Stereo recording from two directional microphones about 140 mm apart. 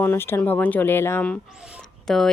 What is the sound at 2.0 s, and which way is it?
Speech, 5° left (ahead or behind).